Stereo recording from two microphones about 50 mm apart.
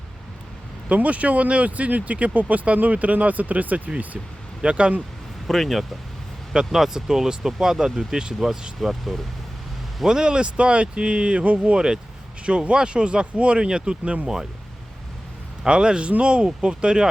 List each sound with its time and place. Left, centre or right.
0.9 s speech: right
5.5 s speech: centre
6.5 s speech: centre
10.1 s speech: centre
15.6 s speech: centre